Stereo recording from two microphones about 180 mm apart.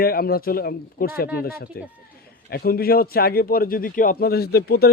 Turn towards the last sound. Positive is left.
turn(degrees=60)  # may be behind; listen again after turning